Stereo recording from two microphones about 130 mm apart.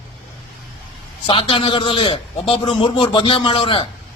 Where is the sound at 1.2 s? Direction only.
40° left (ahead or behind).